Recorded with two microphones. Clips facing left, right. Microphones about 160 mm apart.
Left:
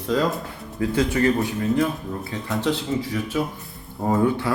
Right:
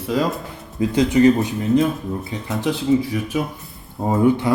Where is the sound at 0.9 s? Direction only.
20° right (ahead or behind).